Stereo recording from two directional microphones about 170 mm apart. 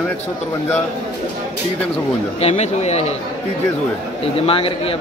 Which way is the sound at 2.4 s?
40° left (ahead or behind).